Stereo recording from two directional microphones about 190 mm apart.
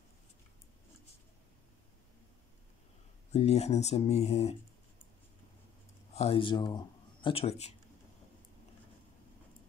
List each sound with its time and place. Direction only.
3.3 s speech: 35° left (ahead or behind)
6.1 s speech: 30° left (ahead or behind)